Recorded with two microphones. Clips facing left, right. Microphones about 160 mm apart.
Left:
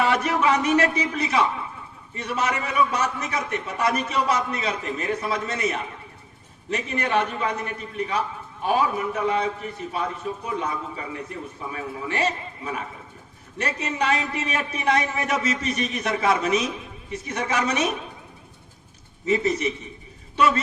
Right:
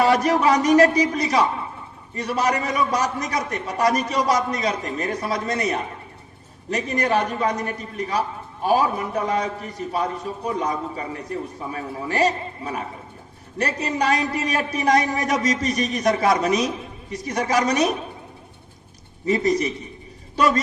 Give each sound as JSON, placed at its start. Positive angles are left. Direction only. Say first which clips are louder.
{"t": 0.0, "sound": "a man's voice", "louder": "right 4 dB", "side_deg": -40}
{"t": 19.2, "sound": "a man's voice", "louder": "right 2 dB", "side_deg": -35}